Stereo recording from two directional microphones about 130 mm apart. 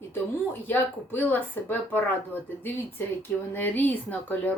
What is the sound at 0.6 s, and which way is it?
Speech, 15° left (ahead or behind).